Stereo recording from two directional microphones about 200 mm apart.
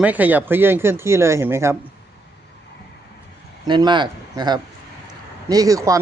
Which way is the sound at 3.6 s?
20° right (ahead or behind).